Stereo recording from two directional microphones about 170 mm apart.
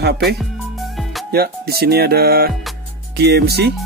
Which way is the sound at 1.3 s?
65° right (ahead or behind).